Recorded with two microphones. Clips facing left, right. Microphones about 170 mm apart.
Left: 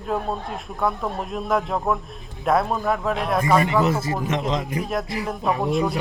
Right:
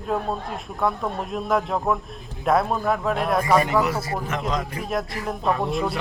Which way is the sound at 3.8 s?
25° left (ahead or behind).